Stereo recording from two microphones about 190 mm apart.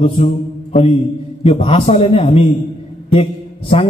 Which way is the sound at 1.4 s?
35° left (ahead or behind).